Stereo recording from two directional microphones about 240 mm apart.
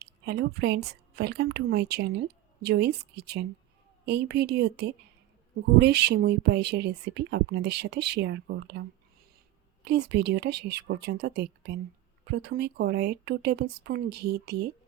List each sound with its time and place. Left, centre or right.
0.0 s a woman's voice: right
9.8 s speech: right